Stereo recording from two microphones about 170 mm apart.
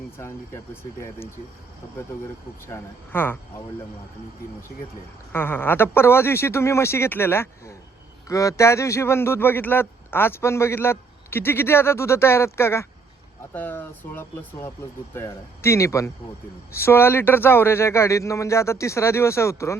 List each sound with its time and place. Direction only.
0.2 s a man's voice: 15° left (ahead or behind)
2.7 s a man's voice: 10° left (ahead or behind)
5.3 s a man's voice: 10° left (ahead or behind)